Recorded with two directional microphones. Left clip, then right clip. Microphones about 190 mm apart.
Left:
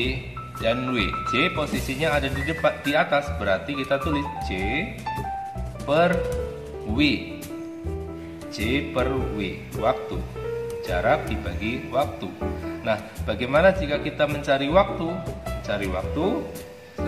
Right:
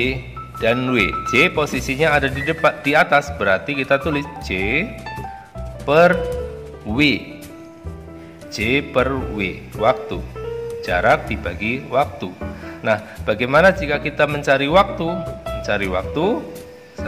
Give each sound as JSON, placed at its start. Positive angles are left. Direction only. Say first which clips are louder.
{"t": 0.0, "sound": "speech", "louder": "right 6 dB", "side_deg": -40}
{"t": 5.9, "sound": "speech", "louder": "right 7 dB", "side_deg": -40}
{"t": 8.5, "sound": "speech", "louder": "right 7 dB", "side_deg": -40}